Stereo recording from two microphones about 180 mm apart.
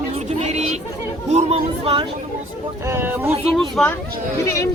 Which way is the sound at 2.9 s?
10° right (ahead or behind).